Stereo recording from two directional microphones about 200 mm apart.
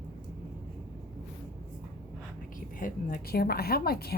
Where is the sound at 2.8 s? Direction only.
45° left (ahead or behind).